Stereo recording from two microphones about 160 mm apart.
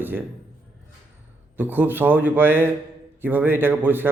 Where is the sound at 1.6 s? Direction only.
10° right (ahead or behind).